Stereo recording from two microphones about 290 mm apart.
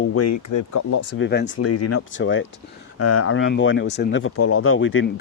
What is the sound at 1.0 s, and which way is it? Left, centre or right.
Speech, left.